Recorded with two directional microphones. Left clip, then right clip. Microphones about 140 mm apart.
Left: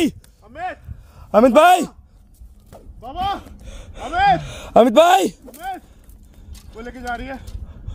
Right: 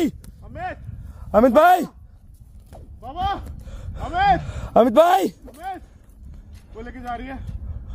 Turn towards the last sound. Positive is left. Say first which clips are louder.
# left 3 dB
turn(degrees=50)  # may be behind; listen again after turning